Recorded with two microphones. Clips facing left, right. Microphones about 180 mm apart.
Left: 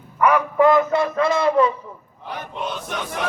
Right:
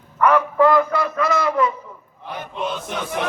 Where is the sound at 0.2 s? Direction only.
15° left (ahead or behind); by 1.7 s 30° left (ahead or behind).